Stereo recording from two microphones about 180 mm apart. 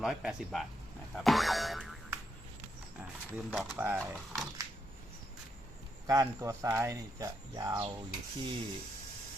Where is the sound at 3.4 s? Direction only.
5° right (ahead or behind).